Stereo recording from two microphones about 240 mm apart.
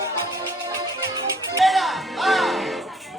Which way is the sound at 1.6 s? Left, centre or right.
Centre.